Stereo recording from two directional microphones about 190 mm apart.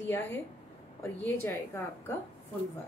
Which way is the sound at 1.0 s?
15° left (ahead or behind).